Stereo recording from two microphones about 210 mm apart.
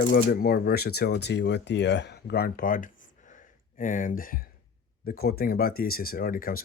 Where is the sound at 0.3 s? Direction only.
45° left (ahead or behind).